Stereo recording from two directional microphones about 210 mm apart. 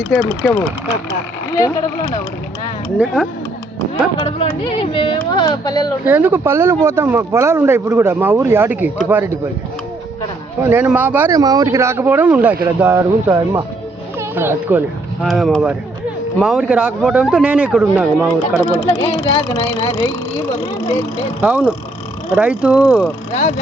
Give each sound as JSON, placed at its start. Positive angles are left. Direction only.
{"t": 0.0, "sound": "speech", "side_deg": 10}
{"t": 3.0, "sound": "speech", "side_deg": -5}
{"t": 4.2, "sound": "speech", "side_deg": 25}
{"t": 6.1, "sound": "speech", "side_deg": -10}
{"t": 10.6, "sound": "speech", "side_deg": -10}
{"t": 19.4, "sound": "speech", "side_deg": 20}
{"t": 21.4, "sound": "speech", "side_deg": -10}
{"t": 23.3, "sound": "speech", "side_deg": 35}